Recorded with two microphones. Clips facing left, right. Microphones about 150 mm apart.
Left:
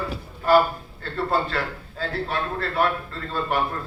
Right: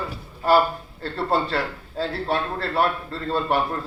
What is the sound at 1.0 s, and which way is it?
A man's voice, 35° right (ahead or behind).